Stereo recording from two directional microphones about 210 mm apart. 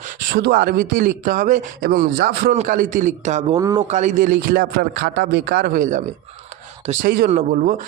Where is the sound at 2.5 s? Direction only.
35° right (ahead or behind).